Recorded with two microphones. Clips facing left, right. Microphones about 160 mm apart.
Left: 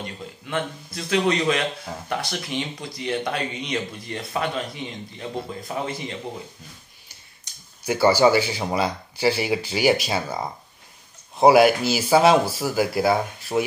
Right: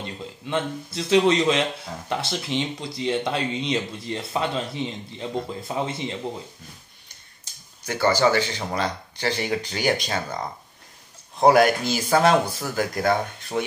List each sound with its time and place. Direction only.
0.5 s speech: 25° right (ahead or behind)
7.5 s a sound: 30° right (ahead or behind)
7.8 s speech: 10° left (ahead or behind)